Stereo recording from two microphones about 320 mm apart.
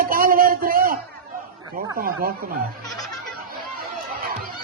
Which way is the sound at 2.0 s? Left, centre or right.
Right.